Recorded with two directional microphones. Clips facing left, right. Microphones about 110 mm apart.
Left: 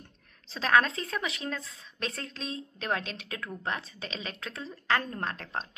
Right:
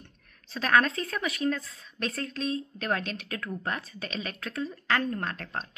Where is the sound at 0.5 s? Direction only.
25° left (ahead or behind).